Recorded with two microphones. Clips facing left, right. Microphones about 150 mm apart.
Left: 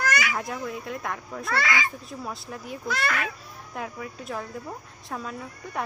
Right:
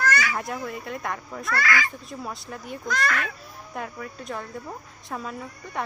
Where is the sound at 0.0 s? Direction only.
15° left (ahead or behind).